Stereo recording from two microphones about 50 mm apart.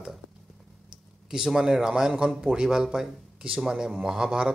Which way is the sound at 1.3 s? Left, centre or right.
Centre.